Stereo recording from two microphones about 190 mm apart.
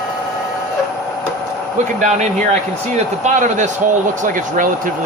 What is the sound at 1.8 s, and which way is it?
Speech, 40° right (ahead or behind).